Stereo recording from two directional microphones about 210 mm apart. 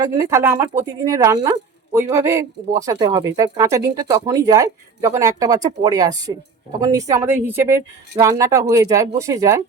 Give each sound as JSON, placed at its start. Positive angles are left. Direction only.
{"t": 0.0, "sound": "speech", "side_deg": -15}